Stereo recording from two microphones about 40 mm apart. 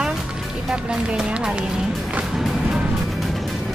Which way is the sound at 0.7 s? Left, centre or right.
Centre.